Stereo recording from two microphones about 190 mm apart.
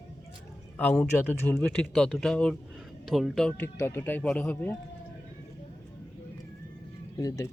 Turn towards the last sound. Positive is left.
turn(degrees=15)  # may be behind; listen again after turning